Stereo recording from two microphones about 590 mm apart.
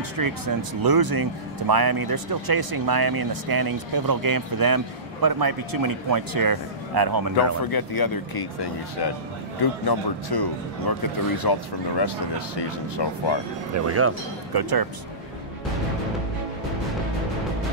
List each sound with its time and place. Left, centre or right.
0.2 s speech: right
7.6 s speech: left
9.8 s speech: left
13.8 s speech: right
14.5 s speech: right